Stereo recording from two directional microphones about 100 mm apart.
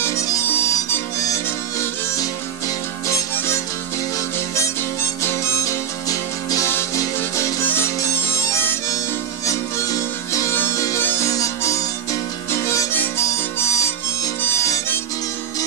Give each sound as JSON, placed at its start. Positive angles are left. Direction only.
{"t": 0.0, "sound": "harmonica", "side_deg": 30}
{"t": 3.1, "sound": "music", "side_deg": 30}
{"t": 5.2, "sound": "music", "side_deg": 25}
{"t": 7.6, "sound": "harmonica", "side_deg": 25}
{"t": 9.5, "sound": "music", "side_deg": 35}
{"t": 10.5, "sound": "music", "side_deg": 20}
{"t": 11.2, "sound": "harmonica", "side_deg": 35}